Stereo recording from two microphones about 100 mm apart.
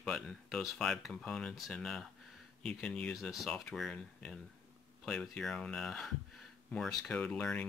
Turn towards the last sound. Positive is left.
turn(degrees=15)  # may be behind; listen again after turning